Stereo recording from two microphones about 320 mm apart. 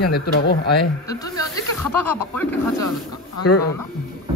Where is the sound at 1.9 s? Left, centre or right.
Centre.